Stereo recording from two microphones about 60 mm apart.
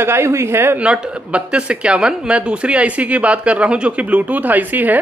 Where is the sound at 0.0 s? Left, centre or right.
Right.